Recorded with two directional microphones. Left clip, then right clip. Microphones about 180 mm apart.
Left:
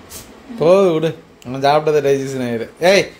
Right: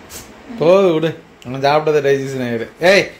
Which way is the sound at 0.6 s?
Centre (ahead or behind).